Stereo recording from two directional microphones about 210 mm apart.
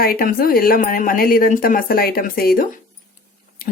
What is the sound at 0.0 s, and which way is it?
Speech, 45° left (ahead or behind).